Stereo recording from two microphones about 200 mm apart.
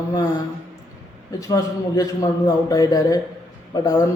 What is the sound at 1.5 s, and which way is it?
A man's voice, 20° left (ahead or behind).